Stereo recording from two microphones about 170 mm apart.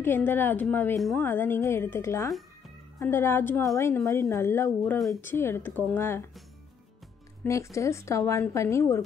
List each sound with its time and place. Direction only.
0.0 s speech: 10° left (ahead or behind)
1.2 s speech: 10° left (ahead or behind)
4.9 s speech: centre (ahead or behind)
5.2 s speech: 15° left (ahead or behind)
7.4 s speech: 15° left (ahead or behind)